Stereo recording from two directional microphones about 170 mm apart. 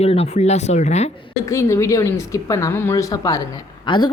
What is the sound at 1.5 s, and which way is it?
A woman's voice, 15° left (ahead or behind).